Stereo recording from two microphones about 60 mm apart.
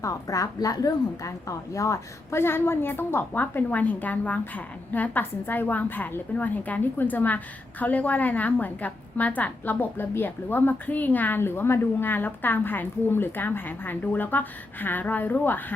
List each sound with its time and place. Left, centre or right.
0.0 s a woman's voice: left
2.3 s a woman's voice: left